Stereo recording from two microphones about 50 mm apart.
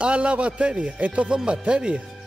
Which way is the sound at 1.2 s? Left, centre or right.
Centre.